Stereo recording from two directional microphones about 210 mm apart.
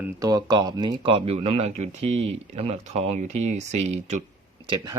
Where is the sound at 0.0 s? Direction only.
15° right (ahead or behind); by 4.2 s 30° right (ahead or behind).